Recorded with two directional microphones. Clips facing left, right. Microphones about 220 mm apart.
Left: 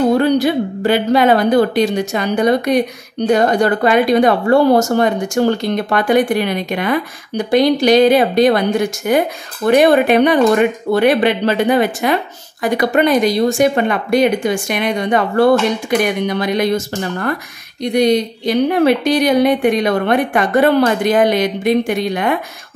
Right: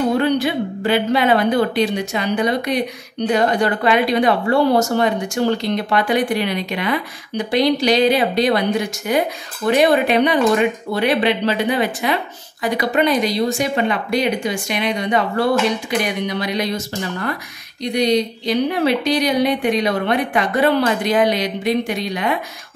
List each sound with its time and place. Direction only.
0.2 s speech: 40° left (ahead or behind)